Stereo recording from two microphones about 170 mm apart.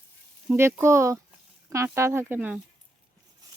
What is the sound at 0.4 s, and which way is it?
Speech, 15° right (ahead or behind).